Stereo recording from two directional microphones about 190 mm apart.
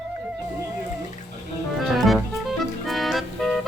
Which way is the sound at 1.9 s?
Centre (ahead or behind).